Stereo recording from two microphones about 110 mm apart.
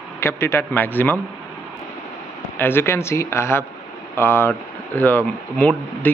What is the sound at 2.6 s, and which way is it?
Speech, 20° left (ahead or behind).